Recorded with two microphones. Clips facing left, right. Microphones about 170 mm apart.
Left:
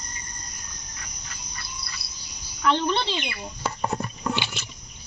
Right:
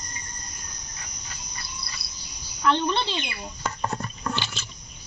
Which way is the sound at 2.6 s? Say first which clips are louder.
Even; centre (ahead or behind).